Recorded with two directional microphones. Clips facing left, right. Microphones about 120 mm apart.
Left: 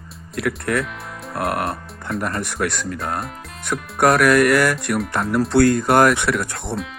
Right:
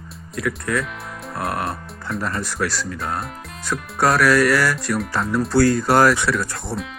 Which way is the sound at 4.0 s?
55° left (ahead or behind).